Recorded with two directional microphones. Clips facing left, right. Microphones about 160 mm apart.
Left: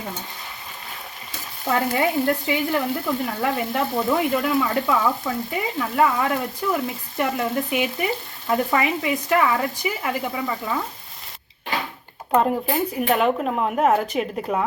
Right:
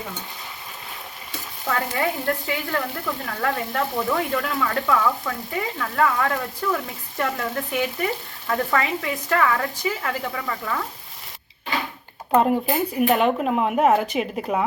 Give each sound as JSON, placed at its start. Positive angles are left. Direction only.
{"t": 1.6, "sound": "frying", "side_deg": 20}
{"t": 12.3, "sound": "speech", "side_deg": -5}